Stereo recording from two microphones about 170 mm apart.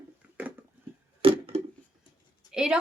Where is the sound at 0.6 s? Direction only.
10° right (ahead or behind).